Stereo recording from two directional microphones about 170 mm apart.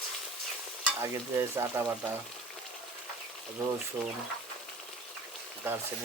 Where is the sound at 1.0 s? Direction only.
15° right (ahead or behind).